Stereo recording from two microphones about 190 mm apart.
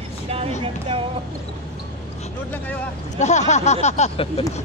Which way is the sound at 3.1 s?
35° left (ahead or behind).